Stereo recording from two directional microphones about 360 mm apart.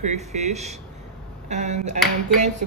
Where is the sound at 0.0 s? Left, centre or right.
Centre.